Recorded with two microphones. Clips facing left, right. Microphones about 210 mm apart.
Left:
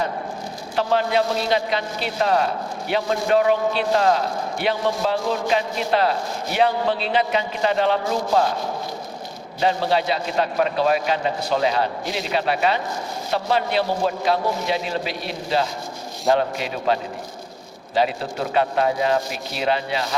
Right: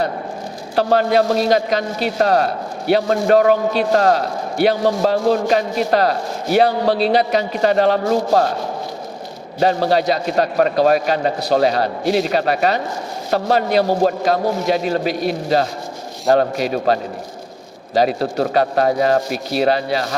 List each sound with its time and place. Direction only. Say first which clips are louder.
0.8 s a man's voice: right 5 dB; 45° right (ahead or behind)
9.6 s a man's voice: right 5 dB; 45° right (ahead or behind)